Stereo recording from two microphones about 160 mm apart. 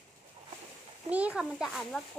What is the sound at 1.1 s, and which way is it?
Speech, 10° right (ahead or behind).